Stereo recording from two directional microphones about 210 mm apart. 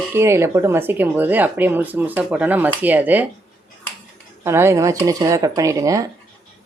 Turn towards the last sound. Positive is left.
turn(degrees=-15)  # may be behind; listen again after turning